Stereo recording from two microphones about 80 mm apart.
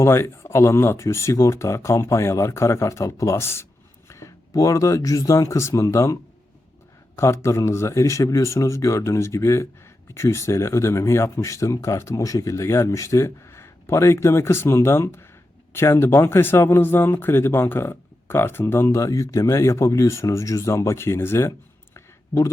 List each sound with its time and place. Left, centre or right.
0.0 s speech: left
7.2 s speech: left